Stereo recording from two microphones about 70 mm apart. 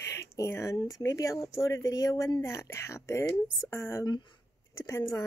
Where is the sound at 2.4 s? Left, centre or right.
Left.